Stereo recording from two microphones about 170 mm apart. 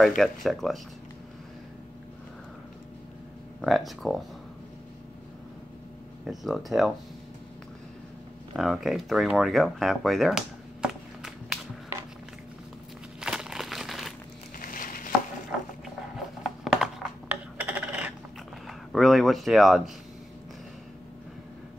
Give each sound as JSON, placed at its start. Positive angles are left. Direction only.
{"t": 0.0, "sound": "speech", "side_deg": 0}
{"t": 3.6, "sound": "speech", "side_deg": 0}
{"t": 6.2, "sound": "speech", "side_deg": 0}
{"t": 8.5, "sound": "speech", "side_deg": 0}
{"t": 13.2, "sound": "crumpling", "side_deg": -5}
{"t": 14.6, "sound": "a sound", "side_deg": 55}
{"t": 16.6, "sound": "coin", "side_deg": -5}
{"t": 18.7, "sound": "speech", "side_deg": 0}